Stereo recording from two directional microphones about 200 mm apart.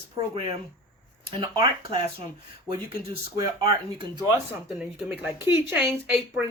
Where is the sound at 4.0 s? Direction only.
20° right (ahead or behind).